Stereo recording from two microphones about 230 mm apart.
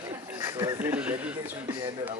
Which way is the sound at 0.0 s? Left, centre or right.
Centre.